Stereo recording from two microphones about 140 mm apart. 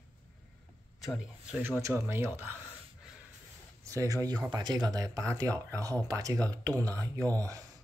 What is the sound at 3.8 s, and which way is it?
Speech, 25° right (ahead or behind).